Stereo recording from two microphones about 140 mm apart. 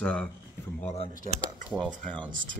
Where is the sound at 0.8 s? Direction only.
45° left (ahead or behind).